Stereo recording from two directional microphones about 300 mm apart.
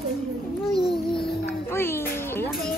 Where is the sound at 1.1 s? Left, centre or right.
Centre.